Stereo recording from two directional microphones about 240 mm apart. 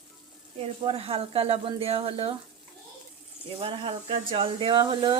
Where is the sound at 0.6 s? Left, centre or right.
Right.